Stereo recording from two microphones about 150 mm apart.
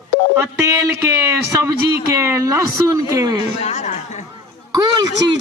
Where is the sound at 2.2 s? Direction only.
20° right (ahead or behind).